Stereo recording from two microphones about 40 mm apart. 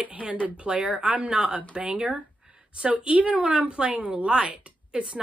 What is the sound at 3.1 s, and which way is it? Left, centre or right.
A woman's voice, right.